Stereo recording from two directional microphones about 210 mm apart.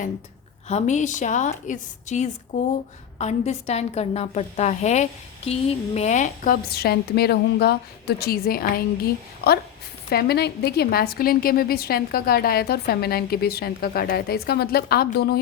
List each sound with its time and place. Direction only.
0.7 s a woman's voice: 35° left (ahead or behind)